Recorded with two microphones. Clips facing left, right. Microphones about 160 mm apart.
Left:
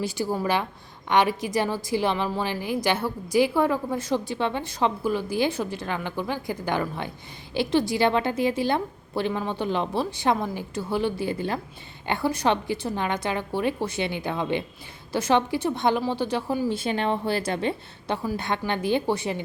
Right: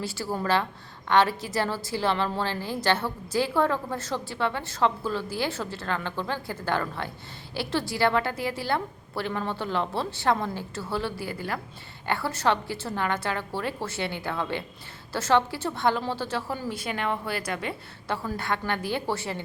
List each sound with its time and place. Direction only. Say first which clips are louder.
0.0 s a woman's voice: left 4 dB; 15° left (ahead or behind)